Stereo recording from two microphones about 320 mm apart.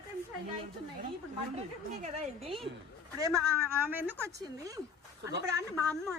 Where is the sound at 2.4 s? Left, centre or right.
Centre.